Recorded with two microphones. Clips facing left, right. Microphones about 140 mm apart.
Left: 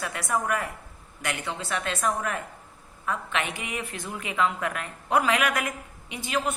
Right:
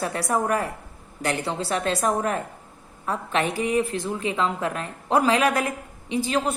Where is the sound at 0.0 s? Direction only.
35° right (ahead or behind).